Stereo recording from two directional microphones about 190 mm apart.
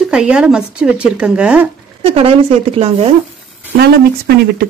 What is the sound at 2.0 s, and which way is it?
Speech, 30° right (ahead or behind).